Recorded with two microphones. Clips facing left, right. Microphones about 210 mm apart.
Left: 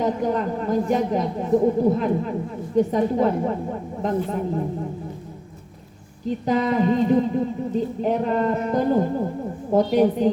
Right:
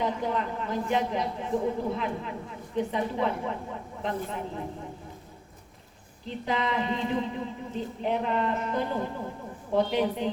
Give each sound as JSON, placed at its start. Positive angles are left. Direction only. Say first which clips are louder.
{"t": 0.0, "sound": "speech", "louder": "left 7 dB", "side_deg": 45}
{"t": 6.2, "sound": "speech", "louder": "left 8 dB", "side_deg": 45}